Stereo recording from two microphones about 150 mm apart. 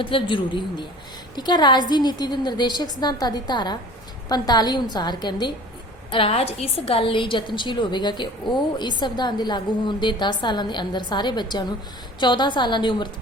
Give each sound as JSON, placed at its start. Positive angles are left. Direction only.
{"t": 0.0, "sound": "a woman's voice", "side_deg": 35}